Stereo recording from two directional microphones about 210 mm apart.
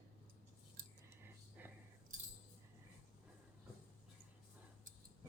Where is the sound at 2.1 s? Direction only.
35° right (ahead or behind).